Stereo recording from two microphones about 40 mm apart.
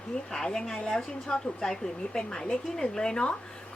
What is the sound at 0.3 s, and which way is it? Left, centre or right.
A woman's voice, centre.